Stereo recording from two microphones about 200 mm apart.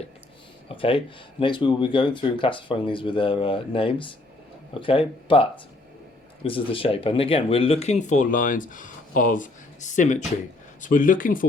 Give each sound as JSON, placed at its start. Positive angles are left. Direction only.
{"t": 0.7, "sound": "speech", "side_deg": 25}